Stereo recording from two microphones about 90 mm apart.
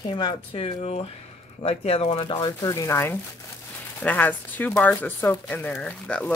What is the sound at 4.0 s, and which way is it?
Speech, 20° left (ahead or behind).